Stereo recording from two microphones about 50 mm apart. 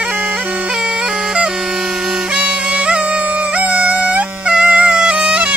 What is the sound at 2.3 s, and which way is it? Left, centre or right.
Music, right.